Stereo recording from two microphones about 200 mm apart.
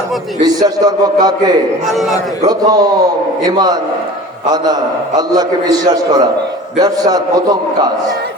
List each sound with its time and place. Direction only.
0.4 s a man's voice: 20° right (ahead or behind)
1.9 s a man's voice: centre (ahead or behind)
2.4 s a man's voice: 20° right (ahead or behind)